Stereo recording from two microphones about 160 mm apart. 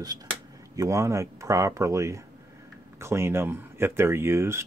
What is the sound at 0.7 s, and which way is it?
Speech, 20° right (ahead or behind).